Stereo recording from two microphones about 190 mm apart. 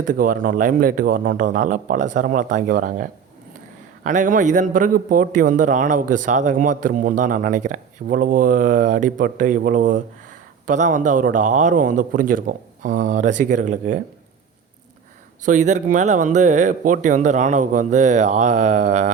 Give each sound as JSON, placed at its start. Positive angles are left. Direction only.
{"t": 0.0, "sound": "a man's voice", "side_deg": -45}
{"t": 15.4, "sound": "speech", "side_deg": -40}